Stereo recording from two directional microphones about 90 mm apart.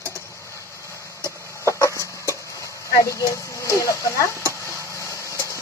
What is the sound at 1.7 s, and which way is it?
Chicken, 35° left (ahead or behind).